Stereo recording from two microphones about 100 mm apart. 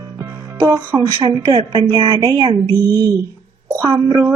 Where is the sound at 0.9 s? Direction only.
45° right (ahead or behind).